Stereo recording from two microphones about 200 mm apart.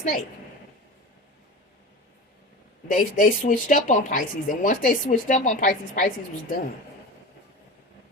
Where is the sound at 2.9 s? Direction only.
40° left (ahead or behind).